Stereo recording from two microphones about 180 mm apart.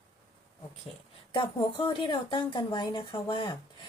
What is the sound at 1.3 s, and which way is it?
A woman's voice, 30° left (ahead or behind).